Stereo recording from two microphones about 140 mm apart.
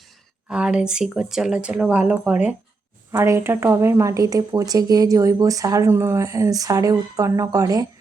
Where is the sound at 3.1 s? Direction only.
20° right (ahead or behind).